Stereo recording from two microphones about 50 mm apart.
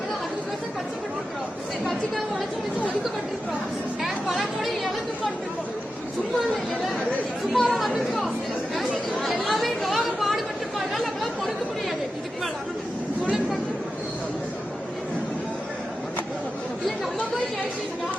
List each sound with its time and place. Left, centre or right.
4.4 s chatter: centre
7.5 s speech: centre
7.8 s chatter: centre